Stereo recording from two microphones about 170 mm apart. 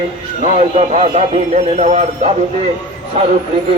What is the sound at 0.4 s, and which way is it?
Speech, 40° right (ahead or behind).